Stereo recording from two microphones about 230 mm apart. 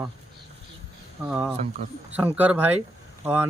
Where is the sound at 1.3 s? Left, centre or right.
Centre.